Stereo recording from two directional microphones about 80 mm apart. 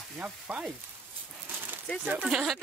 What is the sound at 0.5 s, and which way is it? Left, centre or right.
Frying, right.